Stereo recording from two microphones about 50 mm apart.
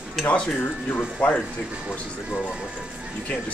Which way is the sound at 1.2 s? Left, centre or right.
Left.